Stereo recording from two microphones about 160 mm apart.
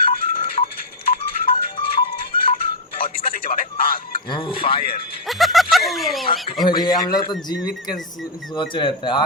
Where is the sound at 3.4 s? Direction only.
65° left (ahead or behind).